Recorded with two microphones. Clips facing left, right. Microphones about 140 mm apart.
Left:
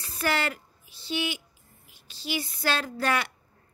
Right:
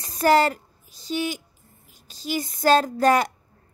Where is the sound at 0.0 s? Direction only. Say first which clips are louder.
Right 10 dB; 40° right (ahead or behind).